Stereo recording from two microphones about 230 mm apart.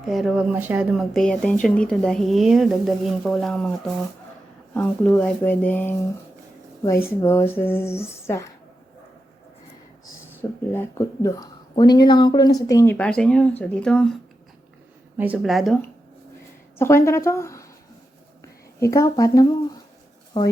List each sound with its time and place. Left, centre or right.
0.0 s speech: centre
4.7 s speech: centre
7.2 s speech: centre
10.7 s speech: centre
15.2 s speech: centre
16.7 s a woman's voice: centre
18.8 s speech: centre